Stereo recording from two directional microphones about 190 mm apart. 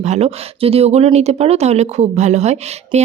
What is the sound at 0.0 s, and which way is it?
Speech, 35° right (ahead or behind).